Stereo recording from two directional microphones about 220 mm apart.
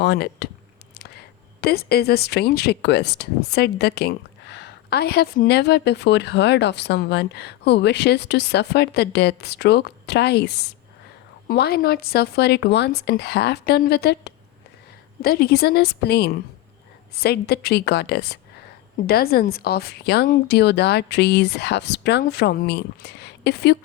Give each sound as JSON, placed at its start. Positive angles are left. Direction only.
{"t": 0.0, "sound": "speech", "side_deg": 50}
{"t": 1.6, "sound": "speech", "side_deg": 45}